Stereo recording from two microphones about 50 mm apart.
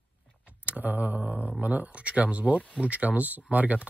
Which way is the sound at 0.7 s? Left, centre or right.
Right.